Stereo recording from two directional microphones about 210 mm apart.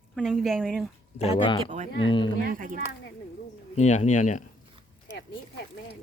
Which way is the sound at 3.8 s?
35° left (ahead or behind).